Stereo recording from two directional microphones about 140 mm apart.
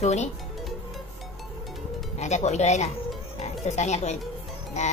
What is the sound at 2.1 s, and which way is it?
Speech, 55° left (ahead or behind).